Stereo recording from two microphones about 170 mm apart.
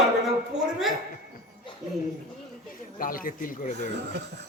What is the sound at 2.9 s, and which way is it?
Speech, 55° left (ahead or behind).